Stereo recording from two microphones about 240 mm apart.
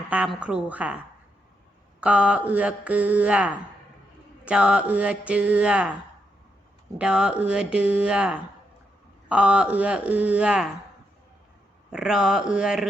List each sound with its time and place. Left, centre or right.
0.1 s mantra: centre
2.0 s mantra: centre
7.0 s mantra: centre
11.9 s mantra: centre